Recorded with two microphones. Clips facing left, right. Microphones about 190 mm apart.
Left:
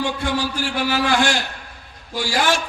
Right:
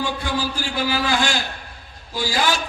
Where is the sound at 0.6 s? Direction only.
70° left (ahead or behind).